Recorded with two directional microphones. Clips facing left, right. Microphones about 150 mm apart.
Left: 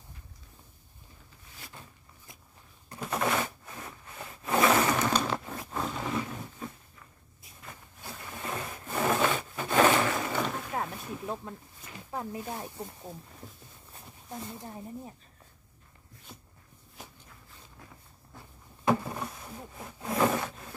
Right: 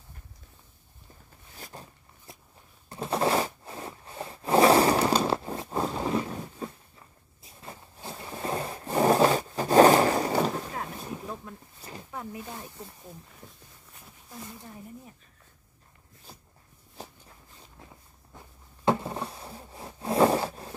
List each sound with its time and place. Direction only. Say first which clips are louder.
1.6 s a sound: right 5 dB; 40° right (ahead or behind)
3.0 s scrape: right 4 dB; 30° right (ahead or behind)
6.6 s a sound: right 4 dB; 35° right (ahead or behind)
7.6 s rub: right 4 dB; 30° right (ahead or behind)
12.1 s snake: left 3 dB; 25° left (ahead or behind)
18.9 s wood: right 1 dB; 30° right (ahead or behind)